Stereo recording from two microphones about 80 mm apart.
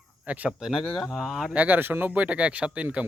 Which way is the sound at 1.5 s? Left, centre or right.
Right.